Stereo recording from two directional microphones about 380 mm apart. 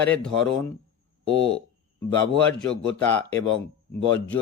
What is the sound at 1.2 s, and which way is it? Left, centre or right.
Speech, left.